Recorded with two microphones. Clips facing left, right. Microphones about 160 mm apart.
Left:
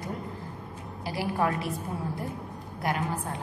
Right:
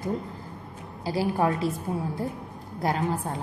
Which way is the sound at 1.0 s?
25° right (ahead or behind).